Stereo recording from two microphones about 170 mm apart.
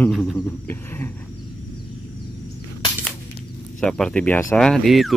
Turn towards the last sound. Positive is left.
turn(degrees=0)  # may be behind; listen again after turning